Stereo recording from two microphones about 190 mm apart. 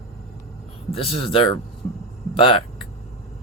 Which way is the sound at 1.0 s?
25° left (ahead or behind).